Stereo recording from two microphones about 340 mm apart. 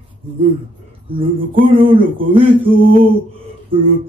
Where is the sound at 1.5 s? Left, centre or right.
Centre.